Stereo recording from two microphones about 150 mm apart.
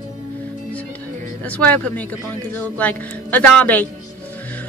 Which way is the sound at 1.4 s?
10° left (ahead or behind).